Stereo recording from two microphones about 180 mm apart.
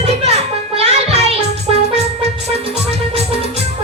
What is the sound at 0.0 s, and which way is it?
Music, 35° right (ahead or behind).